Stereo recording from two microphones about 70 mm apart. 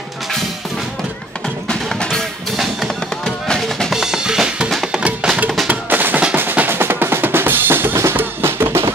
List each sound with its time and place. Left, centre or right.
1.7 s music: centre
2.5 s music: centre
3.3 s music: centre
3.9 s drum kit: centre
4.6 s music: centre
5.0 s music: centre
5.7 s music: right
6.3 s drum: right